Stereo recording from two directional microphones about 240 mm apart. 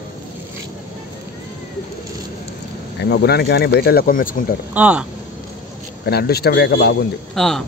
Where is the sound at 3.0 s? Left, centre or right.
Left.